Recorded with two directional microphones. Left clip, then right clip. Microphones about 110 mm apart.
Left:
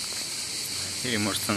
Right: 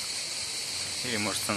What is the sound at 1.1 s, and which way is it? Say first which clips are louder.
Speech: left 3 dB; 5° right (ahead or behind).